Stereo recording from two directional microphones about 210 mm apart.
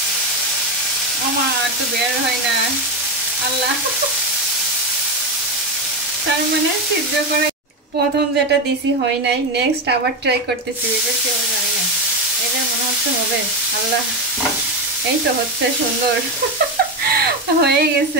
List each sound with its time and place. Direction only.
17.1 s frying: 50° right (ahead or behind)